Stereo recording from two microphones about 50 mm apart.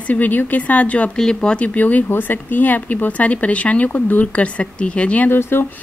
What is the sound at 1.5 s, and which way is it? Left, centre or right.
Speech, left.